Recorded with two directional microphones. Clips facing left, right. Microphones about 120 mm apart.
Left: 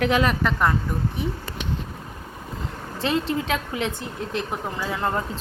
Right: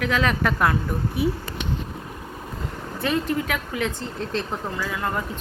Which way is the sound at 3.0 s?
25° left (ahead or behind).